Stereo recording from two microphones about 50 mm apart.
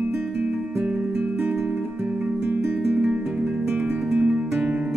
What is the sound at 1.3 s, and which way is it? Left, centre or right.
Guitar, right.